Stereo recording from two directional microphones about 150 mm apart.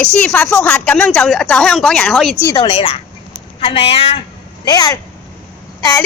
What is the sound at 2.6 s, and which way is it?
A woman's voice, 40° left (ahead or behind).